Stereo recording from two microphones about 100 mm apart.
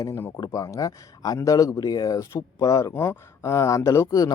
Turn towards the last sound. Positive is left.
turn(degrees=25)  # may be behind; listen again after turning